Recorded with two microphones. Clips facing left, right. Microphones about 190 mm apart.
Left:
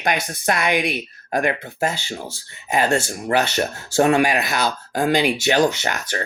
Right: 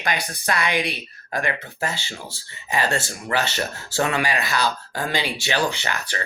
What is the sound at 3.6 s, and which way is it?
Speech, 50° left (ahead or behind).